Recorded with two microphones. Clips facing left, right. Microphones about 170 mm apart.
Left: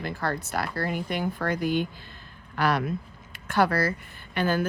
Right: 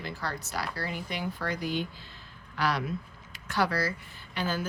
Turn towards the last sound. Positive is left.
turn(degrees=60)  # may be behind; listen again after turning